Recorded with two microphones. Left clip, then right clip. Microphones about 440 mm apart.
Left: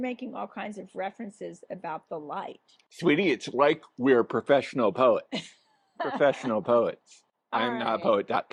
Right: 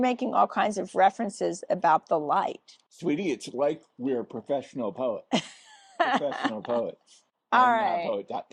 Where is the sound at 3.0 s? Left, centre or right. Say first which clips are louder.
Left 5 dB; centre.